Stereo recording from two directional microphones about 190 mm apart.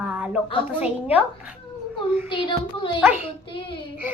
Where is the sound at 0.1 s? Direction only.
5° right (ahead or behind).